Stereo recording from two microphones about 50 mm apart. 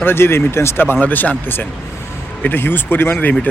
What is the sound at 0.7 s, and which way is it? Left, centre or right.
Speech, left.